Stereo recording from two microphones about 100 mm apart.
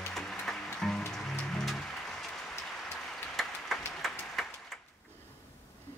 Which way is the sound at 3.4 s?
Centre (ahead or behind).